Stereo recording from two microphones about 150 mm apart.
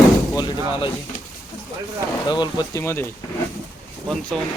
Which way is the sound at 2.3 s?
30° left (ahead or behind).